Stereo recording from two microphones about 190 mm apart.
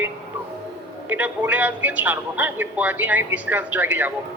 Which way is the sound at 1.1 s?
10° right (ahead or behind).